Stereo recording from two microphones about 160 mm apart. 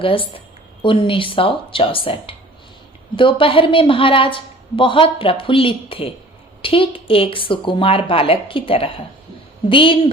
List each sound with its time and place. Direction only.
0.0 s a woman's voice: 35° left (ahead or behind)